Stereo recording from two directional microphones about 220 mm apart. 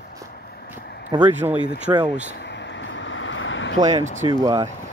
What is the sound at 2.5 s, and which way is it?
Vehicle, 55° left (ahead or behind).